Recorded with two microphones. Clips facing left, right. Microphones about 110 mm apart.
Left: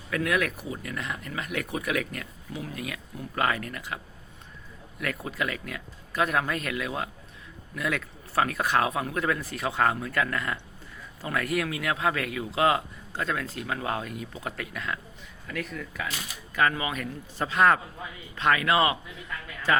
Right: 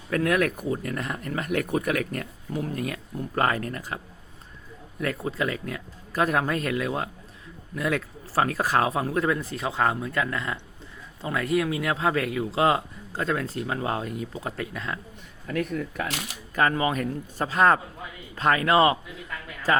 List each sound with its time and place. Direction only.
0.1 s speech: 40° right (ahead or behind)
5.2 s speech: 30° right (ahead or behind)
15.4 s speech: 45° right (ahead or behind)
16.0 s speech: 80° right
16.6 s speech: 35° right (ahead or behind)